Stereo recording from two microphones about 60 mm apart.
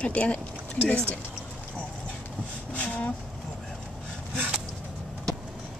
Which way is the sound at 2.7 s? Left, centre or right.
Left.